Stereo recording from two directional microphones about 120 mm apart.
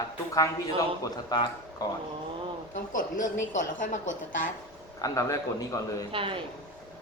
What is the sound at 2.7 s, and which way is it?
A man's voice, 90° left.